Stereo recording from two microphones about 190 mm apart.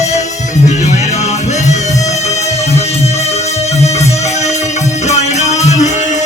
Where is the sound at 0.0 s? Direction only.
35° left (ahead or behind).